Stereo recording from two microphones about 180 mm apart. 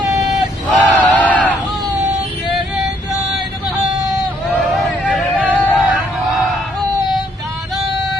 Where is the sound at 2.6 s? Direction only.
Centre (ahead or behind).